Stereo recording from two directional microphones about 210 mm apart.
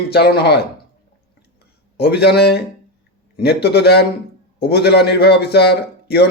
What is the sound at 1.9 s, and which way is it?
A man's voice, 50° left (ahead or behind).